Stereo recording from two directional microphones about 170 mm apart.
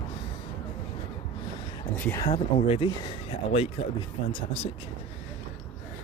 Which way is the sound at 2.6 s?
35° left (ahead or behind).